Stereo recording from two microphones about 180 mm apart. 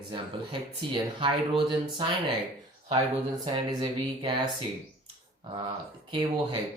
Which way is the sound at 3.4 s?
25° right (ahead or behind).